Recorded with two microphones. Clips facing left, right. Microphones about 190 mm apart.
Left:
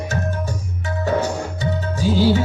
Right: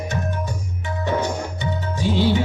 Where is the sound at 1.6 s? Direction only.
40° left (ahead or behind).